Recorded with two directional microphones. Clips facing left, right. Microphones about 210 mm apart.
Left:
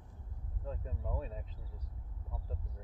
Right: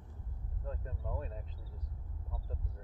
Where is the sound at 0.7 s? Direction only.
5° left (ahead or behind).